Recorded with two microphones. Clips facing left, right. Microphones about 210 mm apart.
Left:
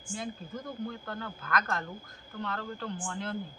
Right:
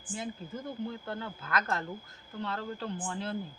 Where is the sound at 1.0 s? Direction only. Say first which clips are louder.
Right 1 dB; 25° right (ahead or behind).